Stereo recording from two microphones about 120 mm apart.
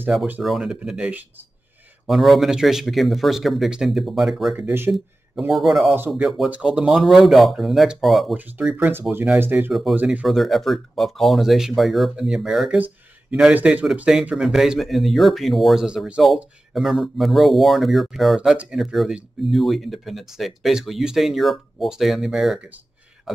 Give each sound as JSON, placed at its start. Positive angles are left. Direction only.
{"t": 0.4, "sound": "speech", "side_deg": -5}
{"t": 4.6, "sound": "speech", "side_deg": -15}
{"t": 5.5, "sound": "speech", "side_deg": 0}
{"t": 5.9, "sound": "speech", "side_deg": -10}
{"t": 8.4, "sound": "speech", "side_deg": -15}
{"t": 9.7, "sound": "speech", "side_deg": 0}
{"t": 9.9, "sound": "speech", "side_deg": -15}
{"t": 10.2, "sound": "speech", "side_deg": 0}
{"t": 12.7, "sound": "a sound", "side_deg": -15}
{"t": 13.4, "sound": "speech", "side_deg": -10}